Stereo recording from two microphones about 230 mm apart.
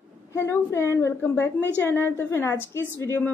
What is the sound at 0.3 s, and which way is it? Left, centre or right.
A woman's voice, centre.